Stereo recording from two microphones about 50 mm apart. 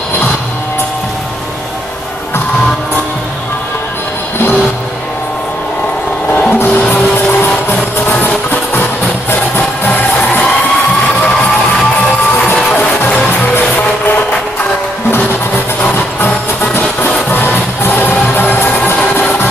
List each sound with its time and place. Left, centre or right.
6.3 s music: left
13.6 s music: left
16.7 s music: left